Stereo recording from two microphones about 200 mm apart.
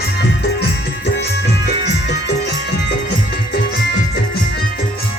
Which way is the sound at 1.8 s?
60° left (ahead or behind).